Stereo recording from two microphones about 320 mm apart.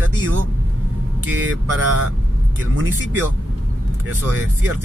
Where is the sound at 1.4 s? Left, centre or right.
Right.